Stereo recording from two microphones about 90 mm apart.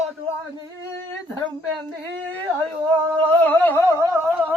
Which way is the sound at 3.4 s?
20° left (ahead or behind).